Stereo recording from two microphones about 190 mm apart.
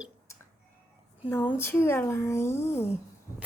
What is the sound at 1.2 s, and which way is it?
Speech, 10° left (ahead or behind).